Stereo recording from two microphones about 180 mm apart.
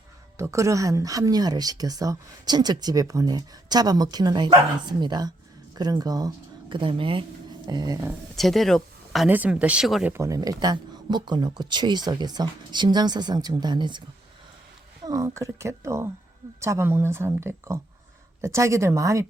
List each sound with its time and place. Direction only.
0.3 s speech: 15° right (ahead or behind)
8.4 s speech: centre (ahead or behind)
10.1 s speech: 15° right (ahead or behind)
15.0 s speech: 20° right (ahead or behind)